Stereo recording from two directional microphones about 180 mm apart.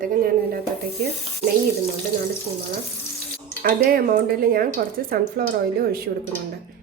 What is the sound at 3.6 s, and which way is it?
A woman's voice, 55° right (ahead or behind).